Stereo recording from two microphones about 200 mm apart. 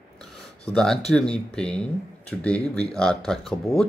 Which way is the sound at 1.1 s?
5° left (ahead or behind).